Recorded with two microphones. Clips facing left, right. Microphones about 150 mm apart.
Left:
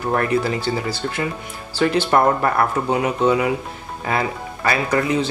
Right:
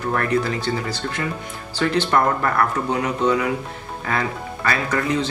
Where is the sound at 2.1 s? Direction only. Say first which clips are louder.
Left 3 dB; 20° left (ahead or behind).